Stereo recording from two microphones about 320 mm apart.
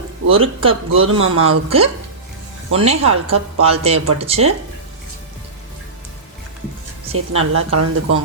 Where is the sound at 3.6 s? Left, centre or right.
Centre.